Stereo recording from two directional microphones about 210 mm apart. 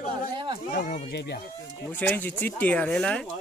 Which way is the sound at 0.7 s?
40° left (ahead or behind).